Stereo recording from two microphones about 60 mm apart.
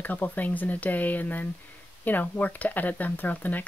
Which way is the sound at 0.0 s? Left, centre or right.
Left.